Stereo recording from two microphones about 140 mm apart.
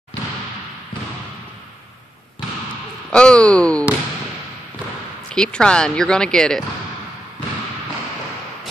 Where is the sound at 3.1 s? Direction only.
5° left (ahead or behind).